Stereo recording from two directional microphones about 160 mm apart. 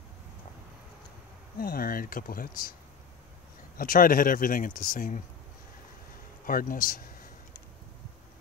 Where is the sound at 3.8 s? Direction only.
60° left (ahead or behind).